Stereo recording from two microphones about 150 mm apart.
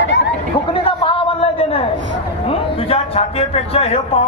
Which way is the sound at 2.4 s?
40° left (ahead or behind).